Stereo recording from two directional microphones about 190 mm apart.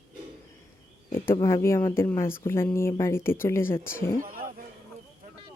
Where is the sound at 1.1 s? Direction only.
15° left (ahead or behind).